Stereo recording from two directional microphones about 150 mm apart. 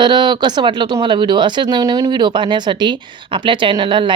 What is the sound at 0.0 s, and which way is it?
Speech, 30° right (ahead or behind).